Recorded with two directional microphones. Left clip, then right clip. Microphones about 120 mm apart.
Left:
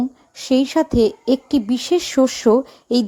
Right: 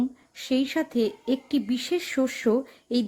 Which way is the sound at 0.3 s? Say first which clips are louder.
Left 9 dB; 30° left (ahead or behind).